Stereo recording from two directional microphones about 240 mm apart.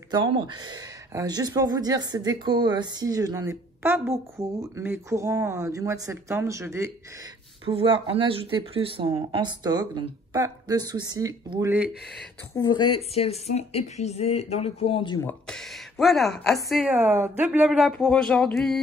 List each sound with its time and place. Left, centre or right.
0.1 s speech: centre
7.6 s speech: right
12.5 s a woman's voice: centre
15.2 s speech: centre